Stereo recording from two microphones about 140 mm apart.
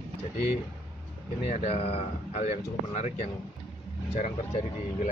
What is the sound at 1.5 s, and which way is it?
Speech, 50° left (ahead or behind).